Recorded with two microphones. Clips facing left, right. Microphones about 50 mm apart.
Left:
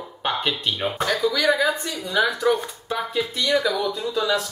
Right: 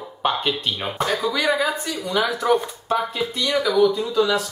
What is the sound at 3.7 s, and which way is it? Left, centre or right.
Speech, right.